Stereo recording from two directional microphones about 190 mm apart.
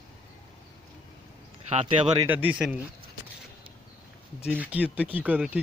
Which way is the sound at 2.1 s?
10° right (ahead or behind).